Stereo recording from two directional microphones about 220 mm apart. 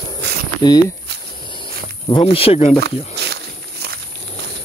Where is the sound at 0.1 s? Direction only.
20° left (ahead or behind).